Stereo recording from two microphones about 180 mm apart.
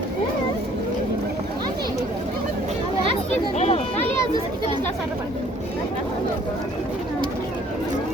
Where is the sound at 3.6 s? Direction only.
35° left (ahead or behind).